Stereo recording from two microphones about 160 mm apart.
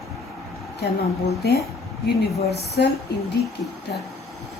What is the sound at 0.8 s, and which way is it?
Speech, 90° left.